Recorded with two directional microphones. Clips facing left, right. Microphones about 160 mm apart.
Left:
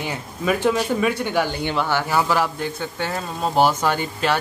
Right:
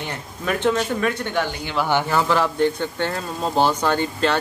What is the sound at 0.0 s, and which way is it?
Speech, 5° left (ahead or behind).